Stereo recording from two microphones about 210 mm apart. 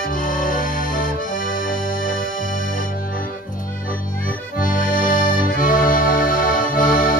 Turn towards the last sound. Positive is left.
turn(degrees=40)  # may be behind; listen again after turning